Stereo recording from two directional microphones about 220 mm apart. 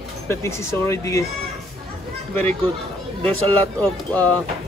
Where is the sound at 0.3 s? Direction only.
10° left (ahead or behind).